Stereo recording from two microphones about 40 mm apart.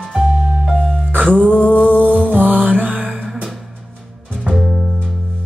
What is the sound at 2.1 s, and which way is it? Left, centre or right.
Music, right.